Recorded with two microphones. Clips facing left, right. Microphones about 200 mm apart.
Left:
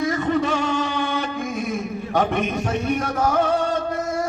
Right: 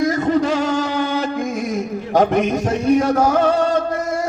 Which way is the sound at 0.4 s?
90° right.